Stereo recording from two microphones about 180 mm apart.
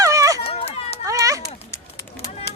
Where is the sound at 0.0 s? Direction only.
20° right (ahead or behind).